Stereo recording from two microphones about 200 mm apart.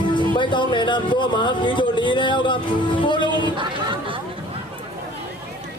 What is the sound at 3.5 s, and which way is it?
Chatter, 25° right (ahead or behind).